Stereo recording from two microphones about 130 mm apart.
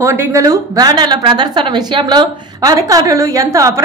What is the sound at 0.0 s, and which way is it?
A woman's voice, 25° right (ahead or behind).